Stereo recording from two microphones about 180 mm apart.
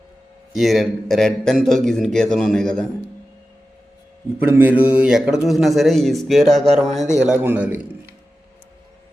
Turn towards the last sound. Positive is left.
turn(degrees=-10)  # may be behind; listen again after turning